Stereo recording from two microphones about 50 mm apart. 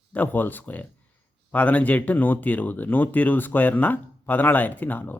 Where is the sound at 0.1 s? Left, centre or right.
Left.